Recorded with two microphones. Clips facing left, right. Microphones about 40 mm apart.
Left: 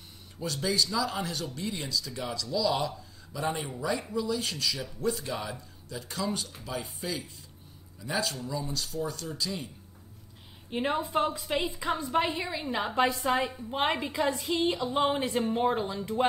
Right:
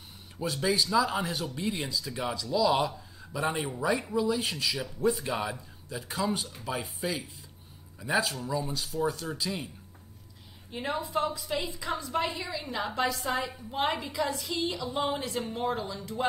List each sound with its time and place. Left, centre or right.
0.4 s speech: centre
10.7 s a woman's voice: left